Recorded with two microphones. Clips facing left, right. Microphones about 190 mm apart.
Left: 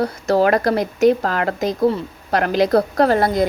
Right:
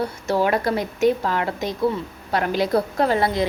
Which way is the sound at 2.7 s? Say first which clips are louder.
Left 4 dB; 40° left (ahead or behind).